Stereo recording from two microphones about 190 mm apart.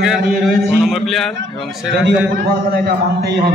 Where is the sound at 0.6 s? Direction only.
Centre (ahead or behind).